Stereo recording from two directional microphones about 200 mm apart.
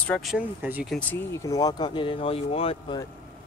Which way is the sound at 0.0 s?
5° left (ahead or behind).